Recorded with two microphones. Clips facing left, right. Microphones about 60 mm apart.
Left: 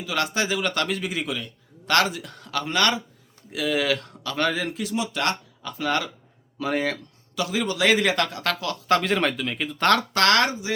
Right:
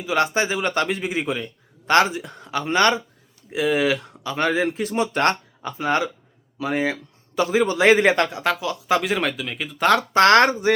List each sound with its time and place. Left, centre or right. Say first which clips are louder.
0.0 s speech: right 5 dB; right
5.7 s speech: right 3 dB; right
6.6 s a man's voice: right 2 dB; centre
7.3 s a man's voice: right 6 dB; right; by 10.0 s centre
10.1 s speech: right 6 dB; right